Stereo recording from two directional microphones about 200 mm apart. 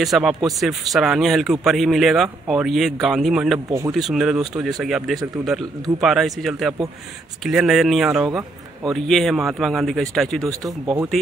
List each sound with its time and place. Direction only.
0.0 s speech: centre (ahead or behind)
3.5 s speech: 15° right (ahead or behind)
3.9 s speech: centre (ahead or behind)
10.6 s speech: 15° right (ahead or behind)